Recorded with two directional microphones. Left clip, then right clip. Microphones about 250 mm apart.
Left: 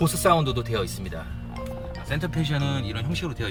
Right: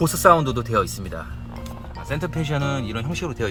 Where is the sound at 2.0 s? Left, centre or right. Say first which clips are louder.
Right 3 dB; centre.